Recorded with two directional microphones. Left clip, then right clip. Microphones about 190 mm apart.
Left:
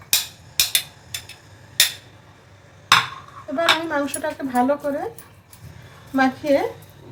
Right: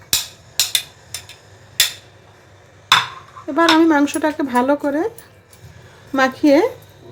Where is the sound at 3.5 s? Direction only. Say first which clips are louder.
Right 7 dB; 55° right (ahead or behind).